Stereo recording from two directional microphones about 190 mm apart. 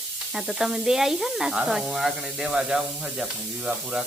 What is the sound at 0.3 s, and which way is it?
Speech, centre (ahead or behind).